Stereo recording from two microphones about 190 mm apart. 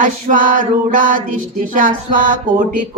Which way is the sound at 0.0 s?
45° right (ahead or behind).